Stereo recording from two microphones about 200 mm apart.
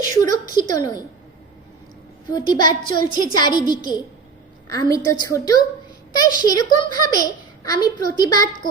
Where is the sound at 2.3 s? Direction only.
20° left (ahead or behind).